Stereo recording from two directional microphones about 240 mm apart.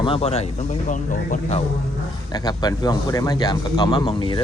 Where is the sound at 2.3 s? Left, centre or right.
Centre.